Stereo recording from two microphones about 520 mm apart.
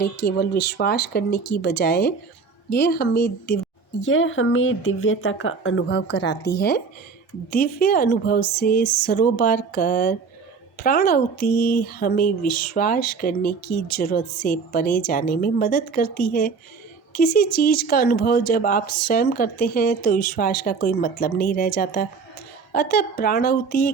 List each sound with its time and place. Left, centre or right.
0.0 s speech: centre